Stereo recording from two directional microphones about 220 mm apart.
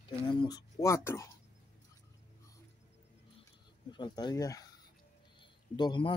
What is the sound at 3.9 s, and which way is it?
A man's voice, 20° left (ahead or behind).